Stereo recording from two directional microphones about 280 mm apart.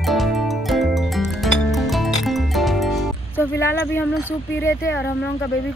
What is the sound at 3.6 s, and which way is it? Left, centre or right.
Speech, centre.